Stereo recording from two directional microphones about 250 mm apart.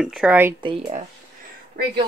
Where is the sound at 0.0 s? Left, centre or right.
Centre.